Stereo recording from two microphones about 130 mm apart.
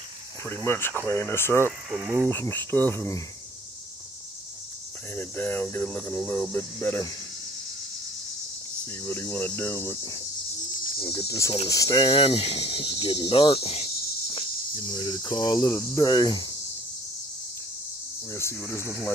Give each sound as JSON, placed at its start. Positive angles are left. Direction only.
{"t": 0.5, "sound": "cricket", "side_deg": 20}
{"t": 1.9, "sound": "speech", "side_deg": -15}
{"t": 2.2, "sound": "cricket", "side_deg": 15}
{"t": 5.1, "sound": "cricket", "side_deg": 15}
{"t": 8.8, "sound": "cricket", "side_deg": 15}
{"t": 9.8, "sound": "speech", "side_deg": 25}
{"t": 11.0, "sound": "speech", "side_deg": 35}
{"t": 15.0, "sound": "cricket", "side_deg": 30}
{"t": 18.3, "sound": "speech", "side_deg": 20}